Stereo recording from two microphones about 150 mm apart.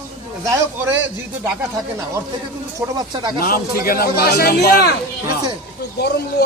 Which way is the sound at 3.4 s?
75° left (ahead or behind).